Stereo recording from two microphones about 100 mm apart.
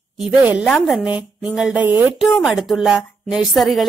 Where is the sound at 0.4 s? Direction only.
15° right (ahead or behind).